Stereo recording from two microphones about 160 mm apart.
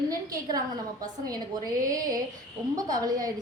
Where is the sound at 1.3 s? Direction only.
25° right (ahead or behind).